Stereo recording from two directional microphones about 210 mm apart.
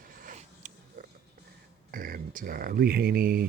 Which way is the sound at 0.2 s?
40° right (ahead or behind).